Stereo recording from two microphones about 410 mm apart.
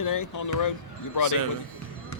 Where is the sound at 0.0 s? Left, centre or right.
Left.